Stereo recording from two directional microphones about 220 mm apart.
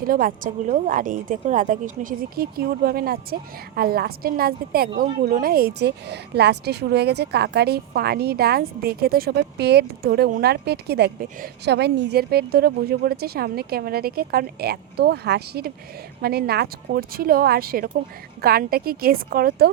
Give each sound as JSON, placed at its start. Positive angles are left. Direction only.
{"t": 0.1, "sound": "a woman's voice", "side_deg": -40}